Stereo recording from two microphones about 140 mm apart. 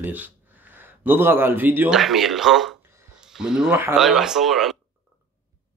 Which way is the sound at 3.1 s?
5° right (ahead or behind).